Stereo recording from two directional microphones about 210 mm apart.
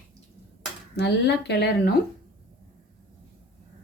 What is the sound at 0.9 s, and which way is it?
Speech, 55° left (ahead or behind).